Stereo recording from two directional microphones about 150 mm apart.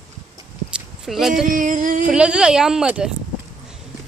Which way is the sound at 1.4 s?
65° right (ahead or behind).